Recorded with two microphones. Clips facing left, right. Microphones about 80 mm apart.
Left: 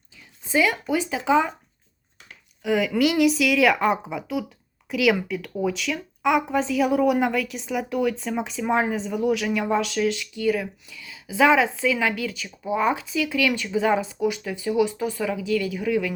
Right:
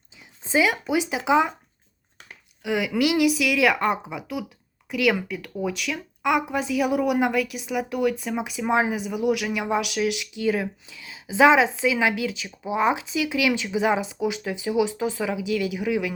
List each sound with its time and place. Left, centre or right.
0.4 s speech: right
2.6 s a woman's voice: centre